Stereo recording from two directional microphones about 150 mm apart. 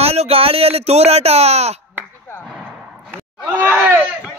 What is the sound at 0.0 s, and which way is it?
Speech, 45° right (ahead or behind).